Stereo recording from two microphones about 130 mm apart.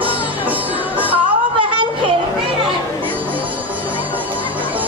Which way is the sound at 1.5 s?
40° right (ahead or behind).